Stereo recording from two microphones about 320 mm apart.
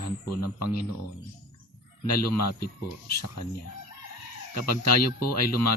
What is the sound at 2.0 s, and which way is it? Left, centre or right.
Speech, left.